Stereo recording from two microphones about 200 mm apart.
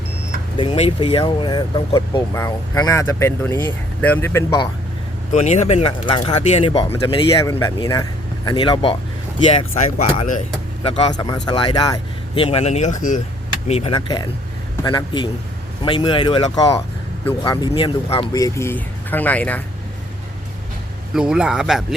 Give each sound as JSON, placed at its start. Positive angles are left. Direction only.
{"t": 0.5, "sound": "speech", "side_deg": 25}
{"t": 5.3, "sound": "speech", "side_deg": 35}
{"t": 10.2, "sound": "speech", "side_deg": 40}
{"t": 10.8, "sound": "speech", "side_deg": 25}
{"t": 21.1, "sound": "speech", "side_deg": -5}